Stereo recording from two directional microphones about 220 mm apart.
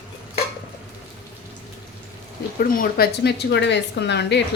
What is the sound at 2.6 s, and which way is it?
A woman's voice, 45° left (ahead or behind).